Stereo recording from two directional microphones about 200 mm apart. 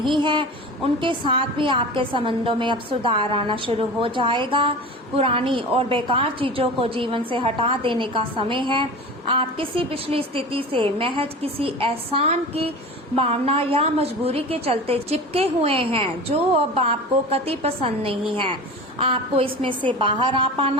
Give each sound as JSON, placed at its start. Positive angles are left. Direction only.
{"t": 0.2, "sound": "a woman's voice", "side_deg": -25}